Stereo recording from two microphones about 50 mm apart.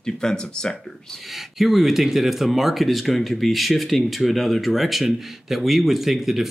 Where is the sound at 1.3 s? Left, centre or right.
Centre.